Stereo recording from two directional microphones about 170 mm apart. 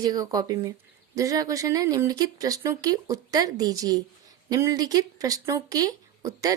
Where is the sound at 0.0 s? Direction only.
25° right (ahead or behind).